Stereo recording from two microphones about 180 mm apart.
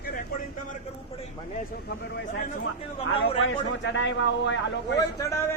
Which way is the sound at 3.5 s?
90° left.